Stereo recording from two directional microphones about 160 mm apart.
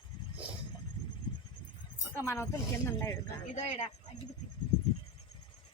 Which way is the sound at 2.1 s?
15° left (ahead or behind).